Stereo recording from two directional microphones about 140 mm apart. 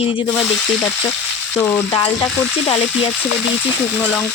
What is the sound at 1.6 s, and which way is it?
Frying, 10° left (ahead or behind).